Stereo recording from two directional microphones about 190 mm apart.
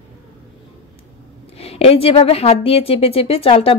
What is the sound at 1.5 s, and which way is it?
Speech, 30° left (ahead or behind).